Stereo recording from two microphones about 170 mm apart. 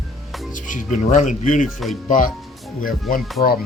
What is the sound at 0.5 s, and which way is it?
Speech, 50° left (ahead or behind).